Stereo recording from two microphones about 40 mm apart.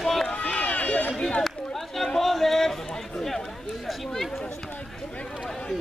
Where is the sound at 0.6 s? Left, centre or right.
Left.